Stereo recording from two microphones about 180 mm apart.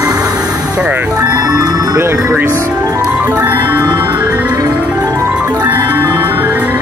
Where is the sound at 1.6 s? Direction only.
20° right (ahead or behind).